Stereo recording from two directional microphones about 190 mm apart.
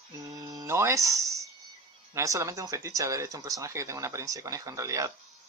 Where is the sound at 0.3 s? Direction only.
20° right (ahead or behind).